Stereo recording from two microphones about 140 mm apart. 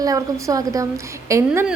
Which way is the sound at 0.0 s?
25° right (ahead or behind).